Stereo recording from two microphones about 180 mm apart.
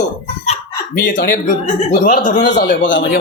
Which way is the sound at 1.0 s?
50° left (ahead or behind).